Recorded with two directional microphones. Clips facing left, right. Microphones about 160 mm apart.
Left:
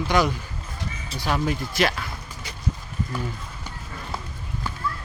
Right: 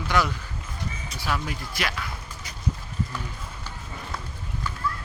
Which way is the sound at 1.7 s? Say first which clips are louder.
Left 6 dB; 30° left (ahead or behind).